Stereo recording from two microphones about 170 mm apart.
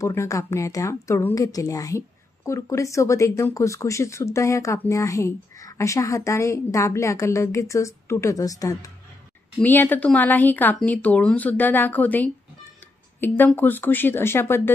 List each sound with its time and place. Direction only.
0.0 s speech: 15° left (ahead or behind)